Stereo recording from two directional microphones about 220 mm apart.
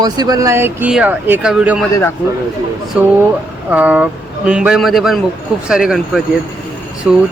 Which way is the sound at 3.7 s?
5° right (ahead or behind).